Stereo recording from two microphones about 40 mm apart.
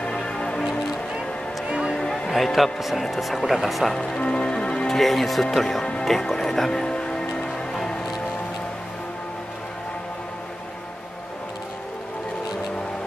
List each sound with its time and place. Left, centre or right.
0.1 s music: centre
1.7 s music: right
2.0 s music: centre
2.3 s speech: centre
3.9 s speech: centre
4.2 s music: left
4.8 s speech: centre
6.0 s music: centre